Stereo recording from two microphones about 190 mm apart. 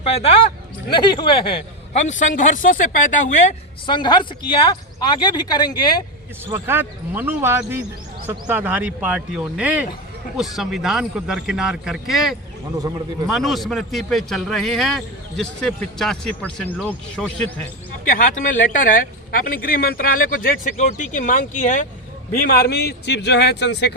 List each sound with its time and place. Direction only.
0.0 s a woman's voice: 30° left (ahead or behind)
3.8 s speech: 25° left (ahead or behind)
6.5 s a man's voice: 10° right (ahead or behind)
18.0 s a woman's voice: 45° left (ahead or behind); by 23.9 s 65° left (ahead or behind)